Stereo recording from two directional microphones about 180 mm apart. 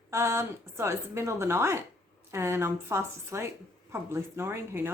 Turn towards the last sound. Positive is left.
turn(degrees=-15)  # may be behind; listen again after turning